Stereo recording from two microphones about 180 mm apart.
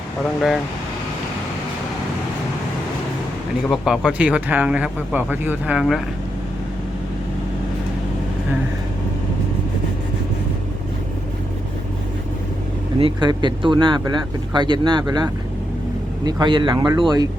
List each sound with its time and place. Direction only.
3.7 s speech: centre (ahead or behind)
13.1 s speech: 25° right (ahead or behind)